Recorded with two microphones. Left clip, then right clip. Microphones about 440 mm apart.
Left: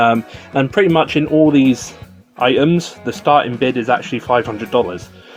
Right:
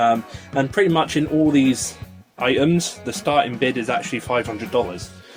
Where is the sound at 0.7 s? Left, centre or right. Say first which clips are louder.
Left 5 dB; left.